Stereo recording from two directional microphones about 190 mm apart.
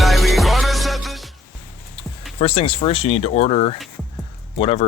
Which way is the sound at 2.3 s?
30° left (ahead or behind).